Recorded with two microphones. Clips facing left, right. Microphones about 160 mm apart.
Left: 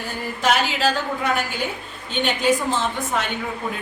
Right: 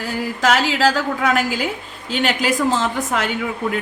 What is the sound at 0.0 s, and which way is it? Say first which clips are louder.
A woman's voice: right 4 dB; 90° right.